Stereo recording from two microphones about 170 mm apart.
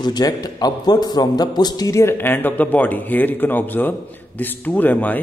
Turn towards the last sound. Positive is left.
turn(degrees=10)  # may be behind; listen again after turning